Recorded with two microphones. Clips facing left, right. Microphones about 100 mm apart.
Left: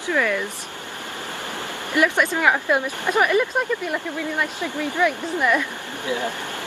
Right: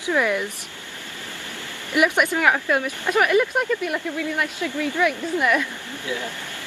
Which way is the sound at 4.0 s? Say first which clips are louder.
Even; 15° left (ahead or behind).